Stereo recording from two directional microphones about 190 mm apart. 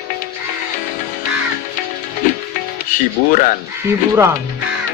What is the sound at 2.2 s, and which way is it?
Music, 45° left (ahead or behind).